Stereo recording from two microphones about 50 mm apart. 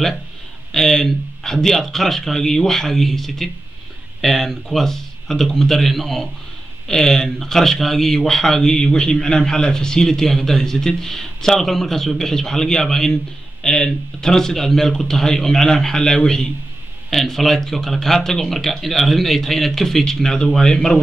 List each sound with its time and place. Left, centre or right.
0.7 s speech: centre